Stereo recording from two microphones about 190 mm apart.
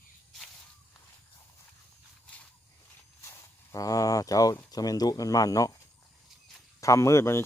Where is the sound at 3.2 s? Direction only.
15° left (ahead or behind).